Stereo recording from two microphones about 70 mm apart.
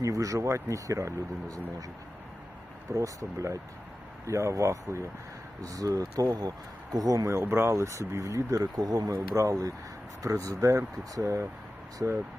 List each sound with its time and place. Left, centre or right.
0.0 s speech: right
2.9 s speech: right
5.6 s speech: right
7.3 s speech: right
8.5 s speech: right
9.1 s speech: right